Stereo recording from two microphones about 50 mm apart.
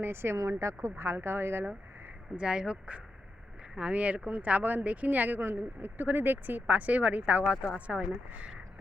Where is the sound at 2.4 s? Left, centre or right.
Centre.